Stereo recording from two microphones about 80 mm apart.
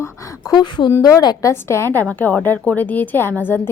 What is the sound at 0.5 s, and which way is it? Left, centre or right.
Speech, left.